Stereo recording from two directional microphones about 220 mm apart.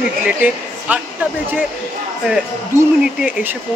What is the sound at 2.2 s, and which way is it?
Speech, 5° right (ahead or behind).